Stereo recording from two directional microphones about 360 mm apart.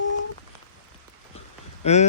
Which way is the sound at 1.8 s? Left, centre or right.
Centre.